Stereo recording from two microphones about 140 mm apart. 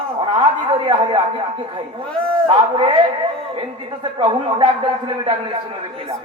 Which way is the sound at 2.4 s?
40° right (ahead or behind).